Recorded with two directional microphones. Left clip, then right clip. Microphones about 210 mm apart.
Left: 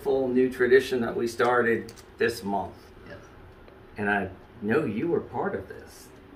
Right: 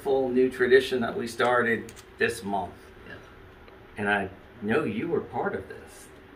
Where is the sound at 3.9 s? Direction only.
15° right (ahead or behind).